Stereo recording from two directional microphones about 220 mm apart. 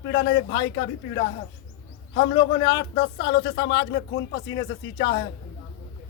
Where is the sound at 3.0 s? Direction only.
50° left (ahead or behind).